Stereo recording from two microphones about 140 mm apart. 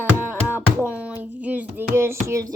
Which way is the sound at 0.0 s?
15° right (ahead or behind).